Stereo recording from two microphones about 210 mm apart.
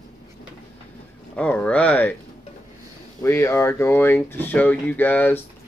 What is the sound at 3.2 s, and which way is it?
Speech, 15° left (ahead or behind).